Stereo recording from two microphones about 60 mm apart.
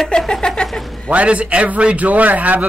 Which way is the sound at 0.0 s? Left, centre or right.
Centre.